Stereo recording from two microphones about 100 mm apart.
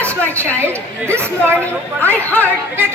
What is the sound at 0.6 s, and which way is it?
Speech, 25° right (ahead or behind).